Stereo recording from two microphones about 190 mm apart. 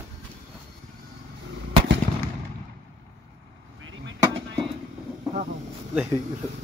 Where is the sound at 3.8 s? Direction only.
90° right.